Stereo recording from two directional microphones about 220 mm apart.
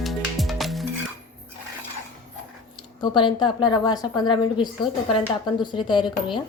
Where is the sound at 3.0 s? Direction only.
20° left (ahead or behind).